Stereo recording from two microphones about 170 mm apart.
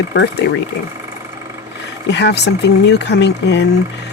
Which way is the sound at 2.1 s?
80° left.